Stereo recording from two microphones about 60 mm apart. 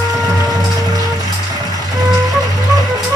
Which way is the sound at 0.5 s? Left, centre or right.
Right.